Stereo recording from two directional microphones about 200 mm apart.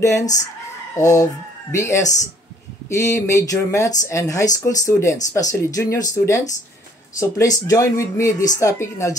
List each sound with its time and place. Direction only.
0.9 s speech: 15° left (ahead or behind)